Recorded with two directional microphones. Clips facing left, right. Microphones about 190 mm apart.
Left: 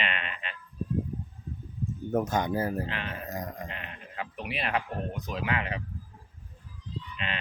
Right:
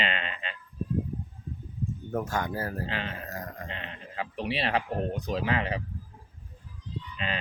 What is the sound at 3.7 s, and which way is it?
Speech, 30° right (ahead or behind).